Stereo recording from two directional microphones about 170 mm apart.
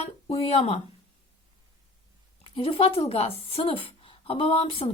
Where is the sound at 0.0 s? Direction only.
35° left (ahead or behind).